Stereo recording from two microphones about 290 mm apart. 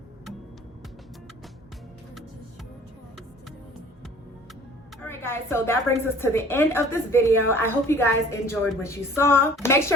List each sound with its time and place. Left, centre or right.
5.0 s a woman's voice: centre